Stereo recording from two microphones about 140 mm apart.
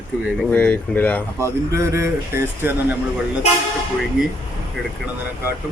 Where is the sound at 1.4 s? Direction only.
20° right (ahead or behind).